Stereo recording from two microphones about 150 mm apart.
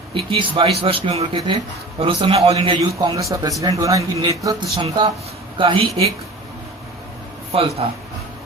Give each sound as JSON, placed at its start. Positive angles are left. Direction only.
{"t": 0.1, "sound": "speech", "side_deg": -35}
{"t": 7.5, "sound": "speech", "side_deg": -40}